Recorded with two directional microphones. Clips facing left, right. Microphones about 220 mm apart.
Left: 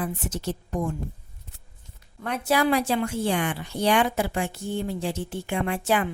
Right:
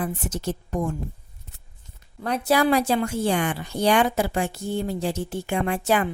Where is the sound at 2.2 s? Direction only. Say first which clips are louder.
Right 2 dB; 35° right (ahead or behind).